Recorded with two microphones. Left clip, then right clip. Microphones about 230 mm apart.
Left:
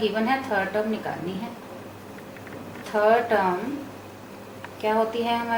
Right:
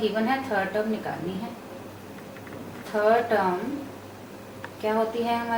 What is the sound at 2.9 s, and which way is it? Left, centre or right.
Speech, centre.